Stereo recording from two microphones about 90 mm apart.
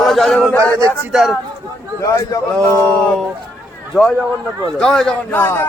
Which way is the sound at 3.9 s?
5° left (ahead or behind).